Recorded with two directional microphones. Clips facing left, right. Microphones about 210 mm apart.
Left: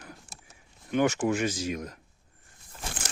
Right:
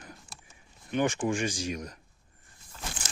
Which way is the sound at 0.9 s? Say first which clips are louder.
Left 3 dB; 10° left (ahead or behind).